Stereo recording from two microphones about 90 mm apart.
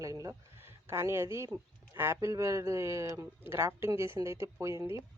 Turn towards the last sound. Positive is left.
turn(degrees=-35)  # may be behind; listen again after turning